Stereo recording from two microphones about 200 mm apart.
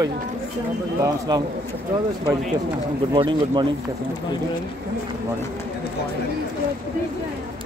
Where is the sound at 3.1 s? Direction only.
25° right (ahead or behind).